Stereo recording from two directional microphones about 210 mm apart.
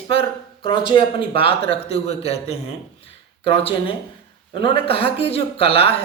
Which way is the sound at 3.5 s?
25° left (ahead or behind).